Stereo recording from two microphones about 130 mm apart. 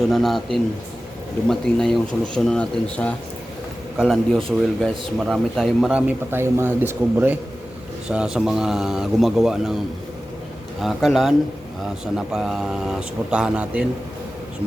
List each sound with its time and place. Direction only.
0.1 s speech: centre (ahead or behind)
5.9 s speech: 10° right (ahead or behind)
8.1 s speech: 5° right (ahead or behind)
10.8 s speech: centre (ahead or behind)